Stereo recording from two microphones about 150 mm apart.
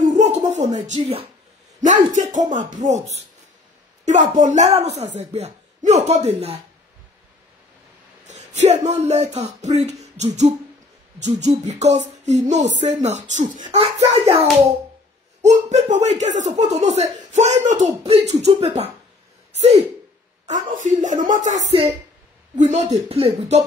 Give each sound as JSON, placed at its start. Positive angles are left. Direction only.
{"t": 0.0, "sound": "a sound", "side_deg": -50}
{"t": 1.8, "sound": "speech", "side_deg": -55}
{"t": 8.3, "sound": "a sound", "side_deg": -50}
{"t": 8.8, "sound": "speech", "side_deg": -50}
{"t": 9.8, "sound": "beatboxing", "side_deg": -50}
{"t": 11.1, "sound": "speech", "side_deg": -50}
{"t": 14.3, "sound": "a child's voice", "side_deg": -40}
{"t": 15.4, "sound": "speech", "side_deg": -50}
{"t": 20.4, "sound": "speech", "side_deg": -60}